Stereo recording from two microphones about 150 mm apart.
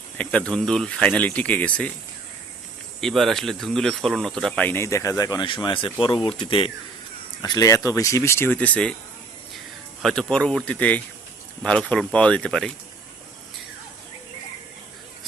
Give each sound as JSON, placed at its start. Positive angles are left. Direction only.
{"t": 0.2, "sound": "speech", "side_deg": 5}
{"t": 3.0, "sound": "speech", "side_deg": 0}
{"t": 7.4, "sound": "speech", "side_deg": 25}
{"t": 10.0, "sound": "speech", "side_deg": 5}